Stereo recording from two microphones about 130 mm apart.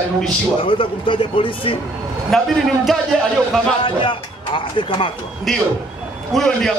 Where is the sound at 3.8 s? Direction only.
40° left (ahead or behind).